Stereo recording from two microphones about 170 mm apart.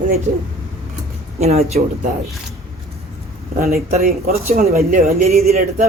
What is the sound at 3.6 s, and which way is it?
Speech, 60° right (ahead or behind).